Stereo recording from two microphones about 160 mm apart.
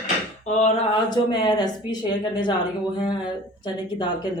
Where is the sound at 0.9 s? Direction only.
30° left (ahead or behind).